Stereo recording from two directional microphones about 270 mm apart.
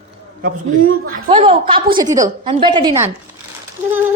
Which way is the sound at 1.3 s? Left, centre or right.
Centre.